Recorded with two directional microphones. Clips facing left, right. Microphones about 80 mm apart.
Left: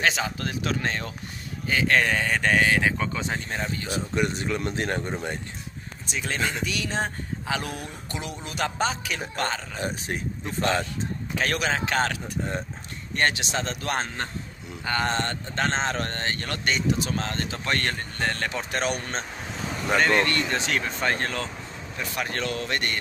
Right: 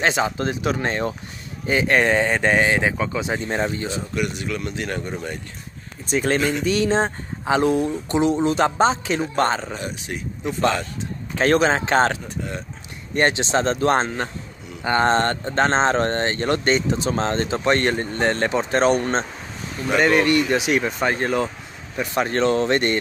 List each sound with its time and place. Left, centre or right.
0.0 s speech: right
3.0 s speech: centre
3.3 s speech: right
4.1 s speech: left
6.0 s speech: right
9.8 s speech: left
11.3 s speech: right
20.0 s speech: centre